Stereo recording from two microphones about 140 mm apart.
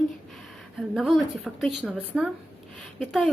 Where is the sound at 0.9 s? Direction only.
Centre (ahead or behind).